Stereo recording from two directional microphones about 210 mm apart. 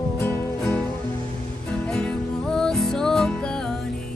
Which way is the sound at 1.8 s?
5° left (ahead or behind).